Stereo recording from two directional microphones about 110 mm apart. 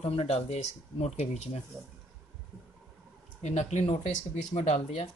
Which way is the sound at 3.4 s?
90° left.